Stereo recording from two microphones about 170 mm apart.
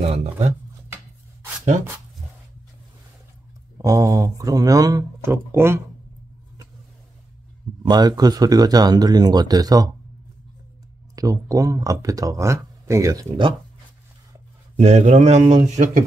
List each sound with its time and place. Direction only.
0.0 s speech: 40° right (ahead or behind)
3.7 s speech: 20° right (ahead or behind)
7.8 s speech: 25° right (ahead or behind)
11.1 s speech: 20° right (ahead or behind)
14.8 s speech: 40° right (ahead or behind)